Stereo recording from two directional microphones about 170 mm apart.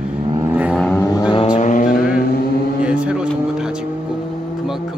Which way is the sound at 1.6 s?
50° left (ahead or behind).